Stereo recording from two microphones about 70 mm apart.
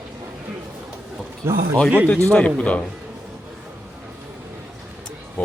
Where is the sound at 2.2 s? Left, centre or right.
Centre.